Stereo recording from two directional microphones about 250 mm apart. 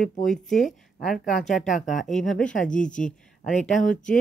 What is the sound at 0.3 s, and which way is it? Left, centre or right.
Speech, centre.